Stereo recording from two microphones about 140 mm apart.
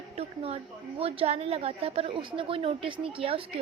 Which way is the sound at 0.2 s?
45° right (ahead or behind).